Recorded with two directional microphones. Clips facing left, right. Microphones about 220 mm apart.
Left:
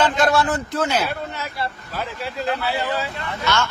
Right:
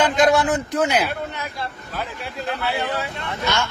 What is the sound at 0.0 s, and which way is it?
A man's voice, 15° right (ahead or behind).